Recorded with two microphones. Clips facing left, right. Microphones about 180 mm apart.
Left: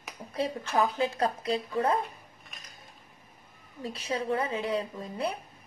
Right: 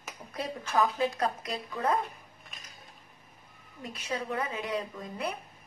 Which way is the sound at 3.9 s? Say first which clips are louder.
Left 4 dB; 30° left (ahead or behind).